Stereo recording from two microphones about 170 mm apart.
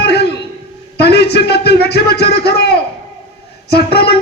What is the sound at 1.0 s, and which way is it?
Speech, 75° left (ahead or behind).